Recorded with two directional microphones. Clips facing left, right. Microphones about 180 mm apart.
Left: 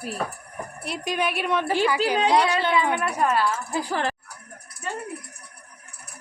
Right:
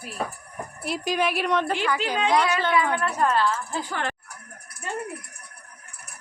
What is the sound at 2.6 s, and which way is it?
A woman's voice, 20° left (ahead or behind).